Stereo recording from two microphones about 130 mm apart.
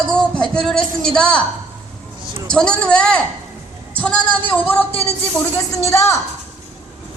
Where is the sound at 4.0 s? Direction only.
10° left (ahead or behind).